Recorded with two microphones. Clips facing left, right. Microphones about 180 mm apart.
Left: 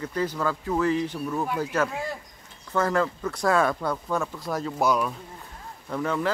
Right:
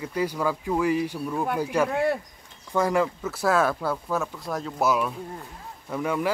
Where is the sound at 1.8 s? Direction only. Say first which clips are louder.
Right 8 dB; 65° right (ahead or behind).